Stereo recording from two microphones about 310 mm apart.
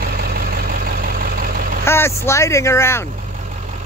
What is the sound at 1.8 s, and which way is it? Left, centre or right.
Speech, centre.